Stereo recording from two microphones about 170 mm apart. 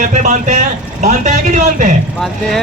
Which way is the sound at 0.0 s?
45° right (ahead or behind).